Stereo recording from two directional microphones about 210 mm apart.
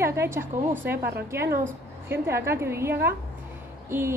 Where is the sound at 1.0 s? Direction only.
50° right (ahead or behind).